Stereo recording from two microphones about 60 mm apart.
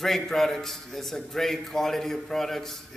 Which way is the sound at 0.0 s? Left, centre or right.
Centre.